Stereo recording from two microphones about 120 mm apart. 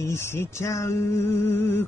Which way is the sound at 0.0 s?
20° left (ahead or behind).